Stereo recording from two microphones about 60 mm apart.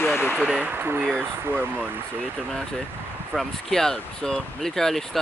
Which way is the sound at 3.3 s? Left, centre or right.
Centre.